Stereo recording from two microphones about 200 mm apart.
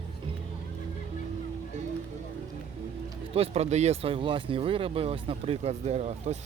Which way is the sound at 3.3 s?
30° right (ahead or behind).